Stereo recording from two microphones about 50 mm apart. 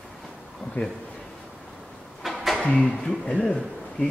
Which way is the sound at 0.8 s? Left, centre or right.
Left.